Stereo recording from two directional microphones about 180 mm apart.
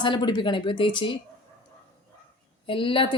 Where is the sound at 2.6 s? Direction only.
30° left (ahead or behind).